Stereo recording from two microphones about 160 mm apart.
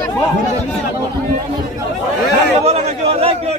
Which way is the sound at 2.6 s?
40° right (ahead or behind).